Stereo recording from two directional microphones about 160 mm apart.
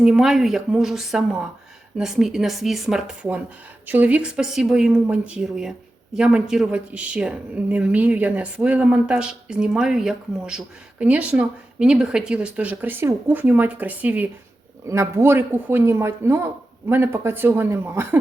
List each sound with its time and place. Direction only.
0.0 s a woman's voice: 5° right (ahead or behind)